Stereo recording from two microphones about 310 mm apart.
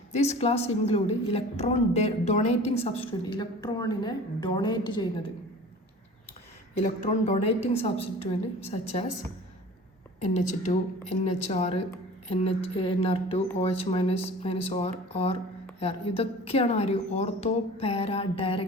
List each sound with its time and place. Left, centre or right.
0.1 s a woman's voice: left
6.8 s a woman's voice: left
10.2 s a woman's voice: left